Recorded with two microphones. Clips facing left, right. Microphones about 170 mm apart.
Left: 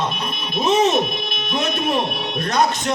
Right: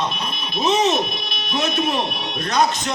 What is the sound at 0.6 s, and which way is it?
Speech, 55° left (ahead or behind).